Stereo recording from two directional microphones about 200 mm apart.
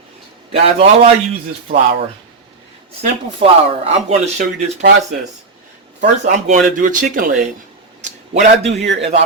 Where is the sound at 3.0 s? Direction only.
30° right (ahead or behind).